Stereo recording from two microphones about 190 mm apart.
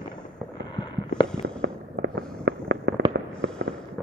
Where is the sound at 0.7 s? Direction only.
20° left (ahead or behind).